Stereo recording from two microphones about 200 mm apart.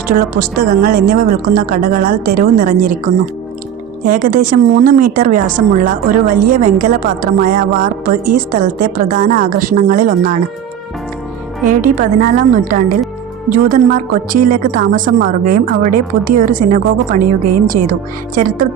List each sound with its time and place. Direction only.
0.1 s speech: 45° right (ahead or behind)
4.2 s speech: 40° right (ahead or behind)
11.8 s a woman's voice: 45° right (ahead or behind)
18.3 s speech: 45° right (ahead or behind)